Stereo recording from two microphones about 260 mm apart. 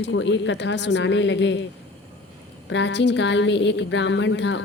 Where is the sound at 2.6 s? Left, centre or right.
Left.